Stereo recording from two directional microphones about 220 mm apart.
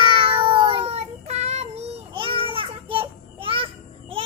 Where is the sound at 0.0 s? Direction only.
25° right (ahead or behind).